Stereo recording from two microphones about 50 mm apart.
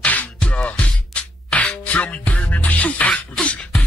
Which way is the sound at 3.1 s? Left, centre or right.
Centre.